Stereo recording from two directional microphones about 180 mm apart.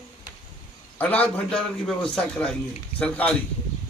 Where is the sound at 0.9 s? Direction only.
10° left (ahead or behind).